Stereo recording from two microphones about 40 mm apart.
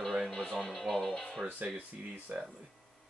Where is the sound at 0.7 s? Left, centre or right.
Centre.